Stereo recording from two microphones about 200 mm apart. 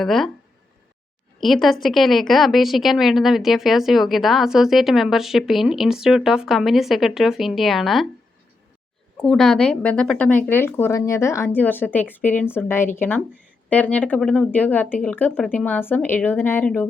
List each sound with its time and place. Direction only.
0.0 s a woman's voice: centre (ahead or behind)
1.4 s a woman's voice: centre (ahead or behind)
9.2 s speech: centre (ahead or behind)